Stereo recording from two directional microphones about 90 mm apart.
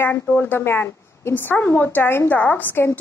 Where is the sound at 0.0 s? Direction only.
20° left (ahead or behind).